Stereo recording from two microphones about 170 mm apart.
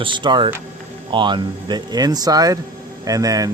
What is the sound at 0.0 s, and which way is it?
Speech, 30° right (ahead or behind).